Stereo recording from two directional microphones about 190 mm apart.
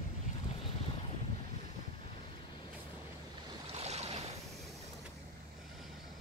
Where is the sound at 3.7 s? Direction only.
35° right (ahead or behind).